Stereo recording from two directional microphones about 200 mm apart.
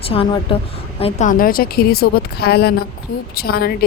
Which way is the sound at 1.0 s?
40° left (ahead or behind).